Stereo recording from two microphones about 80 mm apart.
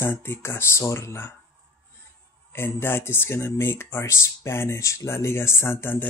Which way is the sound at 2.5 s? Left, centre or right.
Left.